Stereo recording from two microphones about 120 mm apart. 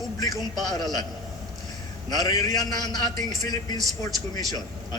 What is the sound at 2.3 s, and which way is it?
A man's voice, 30° left (ahead or behind).